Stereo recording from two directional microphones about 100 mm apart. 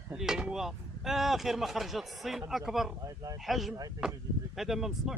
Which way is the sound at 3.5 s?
Centre (ahead or behind).